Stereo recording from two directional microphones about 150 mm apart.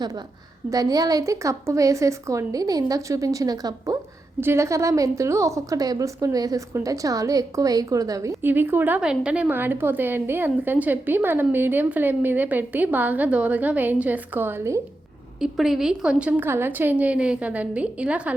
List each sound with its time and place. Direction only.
0.7 s a woman's voice: 25° right (ahead or behind)
15.4 s a woman's voice: centre (ahead or behind)